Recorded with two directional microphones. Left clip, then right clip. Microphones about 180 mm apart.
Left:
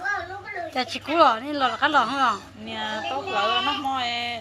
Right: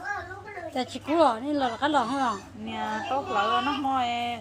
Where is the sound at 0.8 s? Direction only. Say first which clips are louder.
Left 3 dB; 15° right (ahead or behind).